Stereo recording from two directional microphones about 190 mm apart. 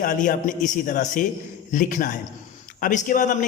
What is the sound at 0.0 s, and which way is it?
A man's voice, 45° left (ahead or behind).